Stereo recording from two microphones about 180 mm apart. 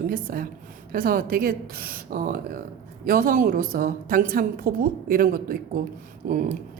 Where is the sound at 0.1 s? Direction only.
50° right (ahead or behind).